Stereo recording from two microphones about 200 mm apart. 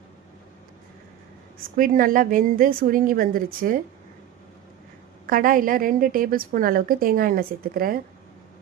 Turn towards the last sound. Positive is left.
turn(degrees=-45)  # may be behind; listen again after turning